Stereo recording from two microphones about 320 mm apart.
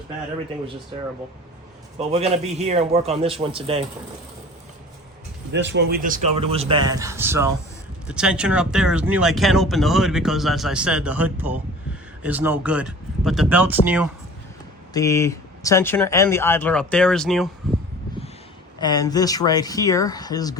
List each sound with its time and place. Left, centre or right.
2.0 s a man's voice: centre
5.5 s speech: right; by 14.1 s centre
14.9 s speech: centre
18.8 s speech: centre